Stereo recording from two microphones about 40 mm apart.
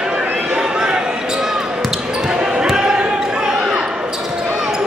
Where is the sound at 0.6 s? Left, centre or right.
Centre.